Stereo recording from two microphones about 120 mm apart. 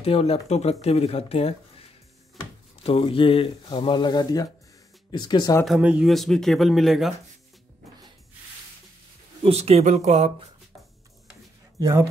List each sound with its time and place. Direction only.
0.0 s speech: 55° left (ahead or behind); by 5.6 s 35° left (ahead or behind)
5.8 s speech: 10° right (ahead or behind)
9.4 s speech: 55° right (ahead or behind)